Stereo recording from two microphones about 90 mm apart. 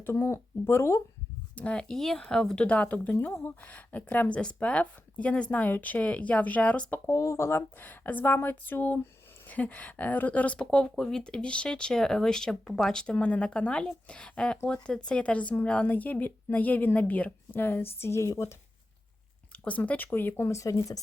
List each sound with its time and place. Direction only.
0.0 s speech: 30° left (ahead or behind)
1.5 s speech: 10° left (ahead or behind)
7.1 s speech: 35° left (ahead or behind)
19.6 s speech: 15° left (ahead or behind); by 21.0 s 40° left (ahead or behind)